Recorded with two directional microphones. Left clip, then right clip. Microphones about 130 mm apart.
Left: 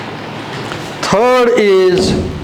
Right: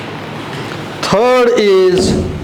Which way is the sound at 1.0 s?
5° left (ahead or behind).